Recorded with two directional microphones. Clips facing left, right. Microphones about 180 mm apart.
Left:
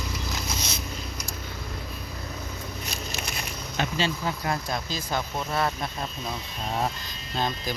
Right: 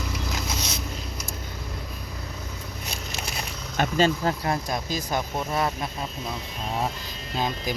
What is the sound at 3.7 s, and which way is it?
Speech, 45° right (ahead or behind).